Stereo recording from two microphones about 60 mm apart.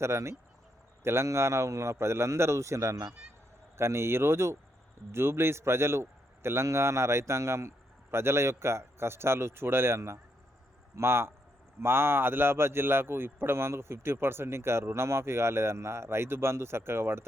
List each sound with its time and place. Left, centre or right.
0.0 s a man's voice: right
3.8 s a man's voice: right